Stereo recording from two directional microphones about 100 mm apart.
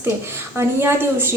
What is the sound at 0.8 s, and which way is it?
Speech, 25° right (ahead or behind).